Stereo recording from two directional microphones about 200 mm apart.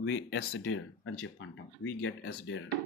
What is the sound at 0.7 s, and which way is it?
Speech, 90° left.